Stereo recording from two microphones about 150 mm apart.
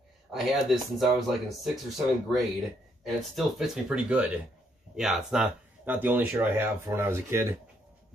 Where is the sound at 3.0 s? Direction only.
Centre (ahead or behind).